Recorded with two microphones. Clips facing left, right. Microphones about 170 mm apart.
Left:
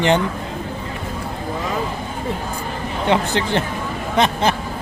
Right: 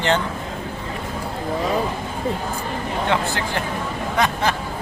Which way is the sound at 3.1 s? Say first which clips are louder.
Left 6 dB; 20° left (ahead or behind).